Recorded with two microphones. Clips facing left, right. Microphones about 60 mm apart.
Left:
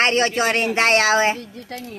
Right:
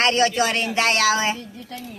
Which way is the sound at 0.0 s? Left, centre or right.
Left.